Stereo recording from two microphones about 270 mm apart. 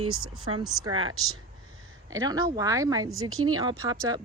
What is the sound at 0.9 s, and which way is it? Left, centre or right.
Speech, right.